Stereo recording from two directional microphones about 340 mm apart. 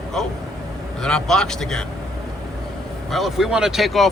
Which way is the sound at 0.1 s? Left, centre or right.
Centre.